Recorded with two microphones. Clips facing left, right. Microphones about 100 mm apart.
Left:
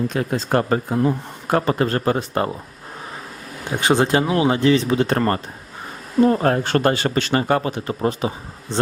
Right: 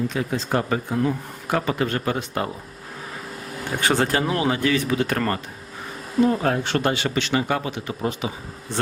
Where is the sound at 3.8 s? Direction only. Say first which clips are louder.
Left 4 dB; 20° left (ahead or behind).